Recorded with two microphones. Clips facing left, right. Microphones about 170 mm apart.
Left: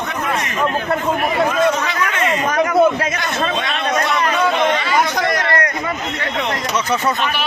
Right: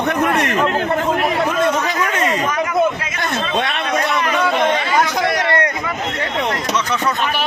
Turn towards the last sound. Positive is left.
turn(degrees=-25)  # may be behind; listen again after turning